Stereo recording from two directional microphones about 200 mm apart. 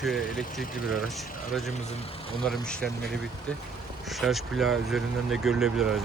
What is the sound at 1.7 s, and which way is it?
Speech, 35° left (ahead or behind).